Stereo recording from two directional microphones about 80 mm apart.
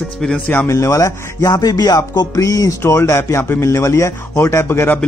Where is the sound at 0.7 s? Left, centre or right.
Left.